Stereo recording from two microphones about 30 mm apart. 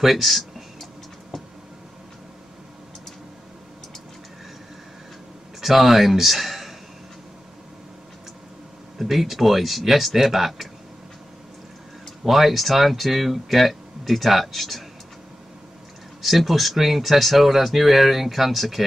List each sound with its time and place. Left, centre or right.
0.0 s a sound: centre
5.6 s speech: centre
9.1 s speech: centre
12.3 s speech: centre
16.2 s speech: centre